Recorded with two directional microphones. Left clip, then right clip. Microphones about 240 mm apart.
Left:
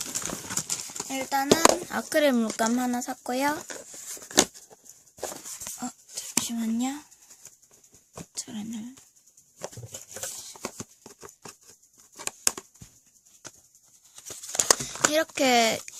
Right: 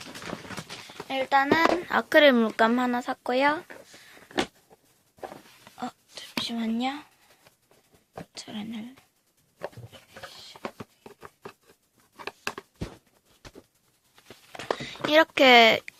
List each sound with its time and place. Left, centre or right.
0.0 s horse: left
1.0 s speech: left
4.3 s a sound: left
6.4 s speech: left
8.4 s speech: left
9.6 s patter: left
14.2 s a sound: left
14.7 s a sound: left
15.1 s speech: centre